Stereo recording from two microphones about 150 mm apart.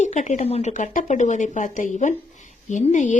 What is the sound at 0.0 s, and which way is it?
Speech, 55° left (ahead or behind).